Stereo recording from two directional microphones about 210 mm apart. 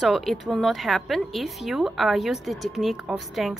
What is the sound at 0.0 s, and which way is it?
A woman's voice, centre (ahead or behind).